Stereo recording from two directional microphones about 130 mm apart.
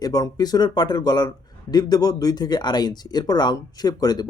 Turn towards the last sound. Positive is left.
turn(degrees=30)  # may be behind; listen again after turning